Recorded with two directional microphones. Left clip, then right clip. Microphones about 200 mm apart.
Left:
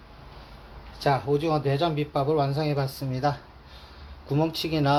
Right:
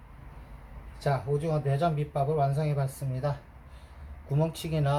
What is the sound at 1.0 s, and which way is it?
A man's voice, 40° left (ahead or behind).